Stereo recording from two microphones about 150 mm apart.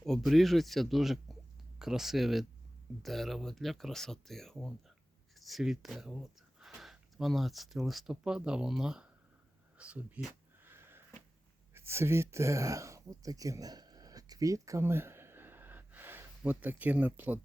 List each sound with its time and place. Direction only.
0.0 s speech: centre (ahead or behind)
10.6 s a sound: 15° right (ahead or behind)
11.7 s speech: 15° right (ahead or behind)